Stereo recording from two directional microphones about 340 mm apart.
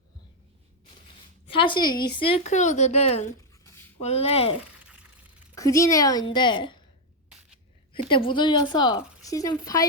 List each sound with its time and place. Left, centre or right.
1.5 s speech: centre
3.3 s a sound: centre
4.0 s speech: centre
5.5 s speech: centre
7.9 s speech: centre